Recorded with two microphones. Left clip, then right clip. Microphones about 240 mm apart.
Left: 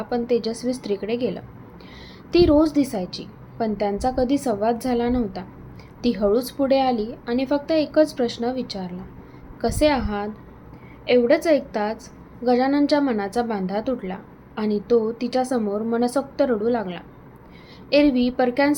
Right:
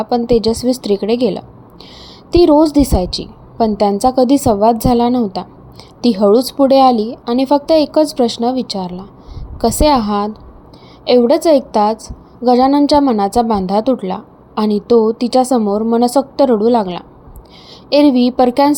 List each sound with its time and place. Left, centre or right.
0.0 s a woman's voice: right